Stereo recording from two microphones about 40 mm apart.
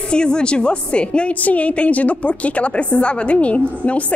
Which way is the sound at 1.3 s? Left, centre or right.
Left.